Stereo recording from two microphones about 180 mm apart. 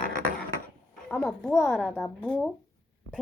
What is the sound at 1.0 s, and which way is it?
A child's voice, centre (ahead or behind).